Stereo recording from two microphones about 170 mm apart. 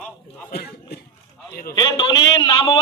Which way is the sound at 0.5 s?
70° left (ahead or behind).